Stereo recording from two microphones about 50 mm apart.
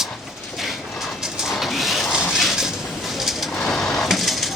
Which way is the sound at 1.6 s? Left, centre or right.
Centre.